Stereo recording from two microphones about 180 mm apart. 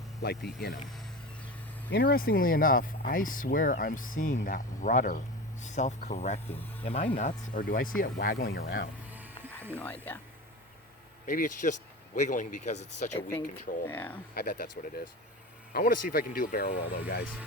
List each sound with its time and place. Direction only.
0.2 s speech: 65° left (ahead or behind)
1.9 s speech: 60° left (ahead or behind)
9.1 s music: 10° right (ahead or behind)
9.7 s speech: 10° left (ahead or behind)
11.3 s speech: 45° left (ahead or behind)
13.8 s speech: 10° left (ahead or behind)
14.3 s speech: 55° left (ahead or behind)